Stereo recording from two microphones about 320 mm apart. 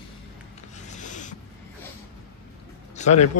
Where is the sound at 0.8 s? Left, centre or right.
Left.